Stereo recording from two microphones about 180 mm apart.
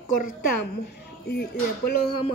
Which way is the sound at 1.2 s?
60° left (ahead or behind).